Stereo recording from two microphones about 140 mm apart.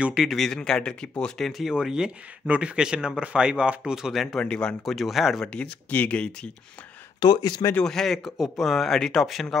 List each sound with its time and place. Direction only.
0.0 s speech: 5° right (ahead or behind)
7.2 s speech: 30° left (ahead or behind)
7.7 s speech: 5° left (ahead or behind)